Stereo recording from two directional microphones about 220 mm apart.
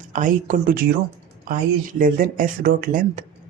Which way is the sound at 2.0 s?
40° right (ahead or behind).